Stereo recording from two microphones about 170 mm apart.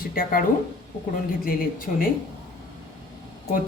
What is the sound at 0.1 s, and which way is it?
Speech, 55° left (ahead or behind).